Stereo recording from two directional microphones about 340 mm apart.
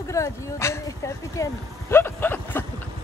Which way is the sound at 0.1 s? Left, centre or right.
Centre.